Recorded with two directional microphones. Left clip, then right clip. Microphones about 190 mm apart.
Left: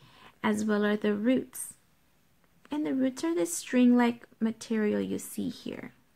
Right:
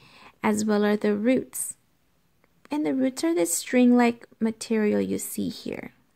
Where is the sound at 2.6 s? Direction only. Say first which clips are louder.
Right 4 dB; 40° right (ahead or behind).